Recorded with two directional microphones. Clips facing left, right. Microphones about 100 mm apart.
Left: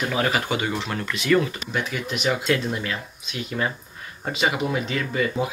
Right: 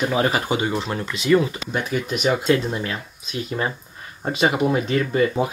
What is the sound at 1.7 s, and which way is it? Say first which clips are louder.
Speech: right 3 dB; 40° right (ahead or behind).